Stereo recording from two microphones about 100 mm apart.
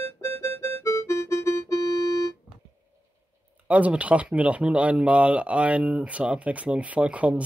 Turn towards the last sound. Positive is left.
turn(degrees=-15)  # may be behind; listen again after turning